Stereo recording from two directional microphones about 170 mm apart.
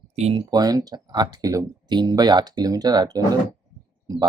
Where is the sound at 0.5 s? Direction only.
20° right (ahead or behind).